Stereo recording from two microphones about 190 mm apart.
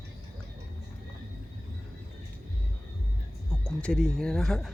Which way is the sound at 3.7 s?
5° left (ahead or behind).